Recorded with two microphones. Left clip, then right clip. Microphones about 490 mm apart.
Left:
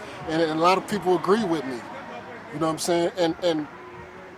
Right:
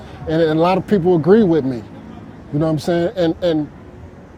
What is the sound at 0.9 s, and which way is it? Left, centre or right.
Speech, right.